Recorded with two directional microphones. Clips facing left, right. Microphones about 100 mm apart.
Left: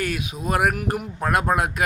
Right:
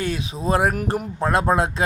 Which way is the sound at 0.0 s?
25° right (ahead or behind).